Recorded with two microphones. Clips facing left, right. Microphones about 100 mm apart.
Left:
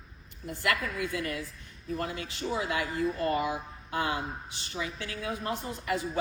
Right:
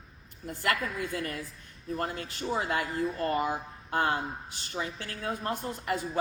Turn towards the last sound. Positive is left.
turn(degrees=-45)  # may be behind; listen again after turning